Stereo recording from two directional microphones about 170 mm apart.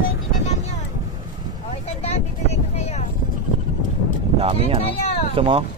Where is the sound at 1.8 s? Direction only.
35° left (ahead or behind).